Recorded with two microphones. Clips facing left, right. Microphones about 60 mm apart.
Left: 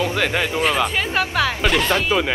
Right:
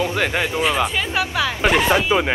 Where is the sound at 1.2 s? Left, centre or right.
Centre.